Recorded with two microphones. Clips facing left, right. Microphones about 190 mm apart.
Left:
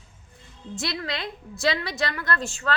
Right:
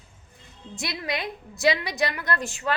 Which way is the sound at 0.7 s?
20° right (ahead or behind).